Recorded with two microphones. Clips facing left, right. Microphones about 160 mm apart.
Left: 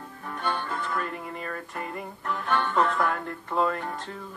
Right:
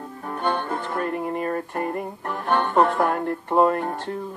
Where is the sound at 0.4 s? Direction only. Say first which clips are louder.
Right 5 dB; 50° right (ahead or behind).